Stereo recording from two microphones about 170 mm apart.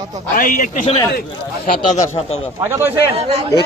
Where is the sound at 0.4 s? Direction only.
50° left (ahead or behind).